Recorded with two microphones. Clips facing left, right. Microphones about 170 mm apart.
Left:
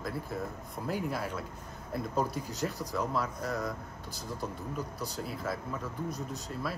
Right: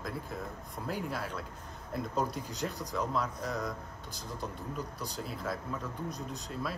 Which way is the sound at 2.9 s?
5° left (ahead or behind).